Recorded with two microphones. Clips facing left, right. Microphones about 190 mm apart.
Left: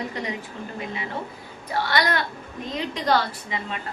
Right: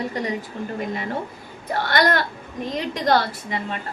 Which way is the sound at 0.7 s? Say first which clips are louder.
Right 4 dB; 45° right (ahead or behind).